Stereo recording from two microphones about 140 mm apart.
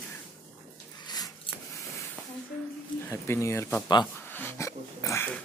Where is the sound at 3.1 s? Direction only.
20° left (ahead or behind).